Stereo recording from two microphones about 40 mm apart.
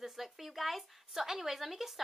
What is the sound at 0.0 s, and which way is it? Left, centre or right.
Speech, centre.